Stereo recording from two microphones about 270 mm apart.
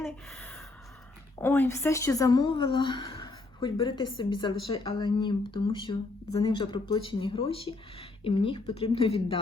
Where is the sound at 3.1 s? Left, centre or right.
Centre.